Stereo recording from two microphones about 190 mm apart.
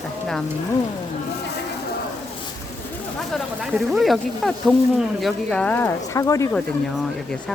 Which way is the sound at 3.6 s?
Centre (ahead or behind).